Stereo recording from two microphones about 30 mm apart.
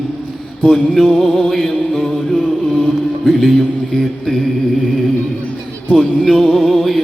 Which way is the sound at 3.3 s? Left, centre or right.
Centre.